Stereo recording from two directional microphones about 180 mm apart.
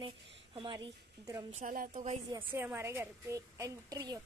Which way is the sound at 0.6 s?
25° right (ahead or behind).